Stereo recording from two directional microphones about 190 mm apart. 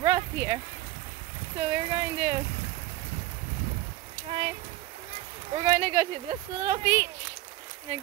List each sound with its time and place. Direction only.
0.0 s a sound: 20° right (ahead or behind)
1.6 s speech: 25° right (ahead or behind)
4.3 s speech: 25° right (ahead or behind)